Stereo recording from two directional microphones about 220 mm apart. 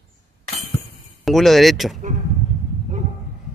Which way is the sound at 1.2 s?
Centre (ahead or behind).